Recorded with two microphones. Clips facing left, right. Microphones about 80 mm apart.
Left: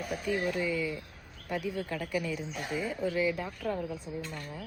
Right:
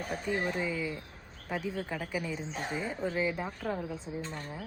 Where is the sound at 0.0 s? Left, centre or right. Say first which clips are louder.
Left 1 dB; right.